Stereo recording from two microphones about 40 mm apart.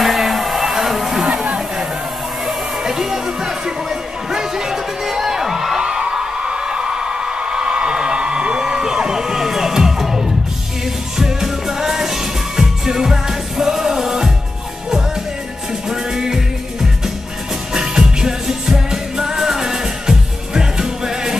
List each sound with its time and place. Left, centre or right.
0.0 s a sound: centre
2.4 s music: centre
5.8 s a sound: right; by 10.3 s centre
11.1 s music: centre
15.9 s music: centre
17.7 s music: centre